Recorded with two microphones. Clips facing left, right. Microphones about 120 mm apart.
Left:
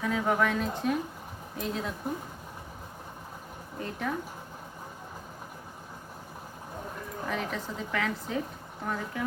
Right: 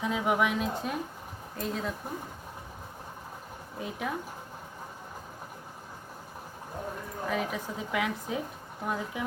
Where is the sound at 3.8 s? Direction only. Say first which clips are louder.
Left 1 dB; 5° right (ahead or behind).